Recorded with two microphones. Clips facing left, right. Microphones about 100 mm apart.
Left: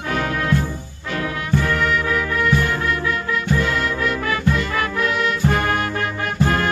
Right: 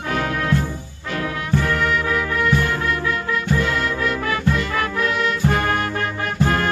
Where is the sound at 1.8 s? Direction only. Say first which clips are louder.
Even; 5° right (ahead or behind).